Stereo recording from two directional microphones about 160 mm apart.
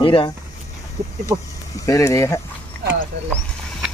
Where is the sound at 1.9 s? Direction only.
20° left (ahead or behind).